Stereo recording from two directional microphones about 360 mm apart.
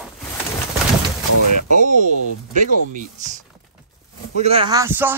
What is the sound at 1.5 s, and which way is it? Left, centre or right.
Speech, right.